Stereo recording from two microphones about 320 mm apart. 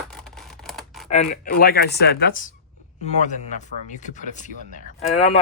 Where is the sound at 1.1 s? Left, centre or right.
Left.